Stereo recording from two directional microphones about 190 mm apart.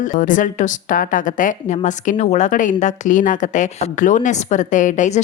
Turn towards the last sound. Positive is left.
turn(degrees=40)  # may be behind; listen again after turning